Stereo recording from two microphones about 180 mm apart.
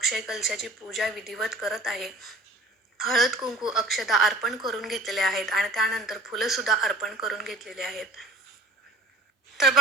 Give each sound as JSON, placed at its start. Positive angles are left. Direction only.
{"t": 0.0, "sound": "a woman's voice", "side_deg": 0}